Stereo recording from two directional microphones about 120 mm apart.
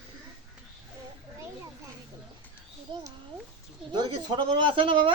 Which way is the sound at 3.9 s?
40° right (ahead or behind).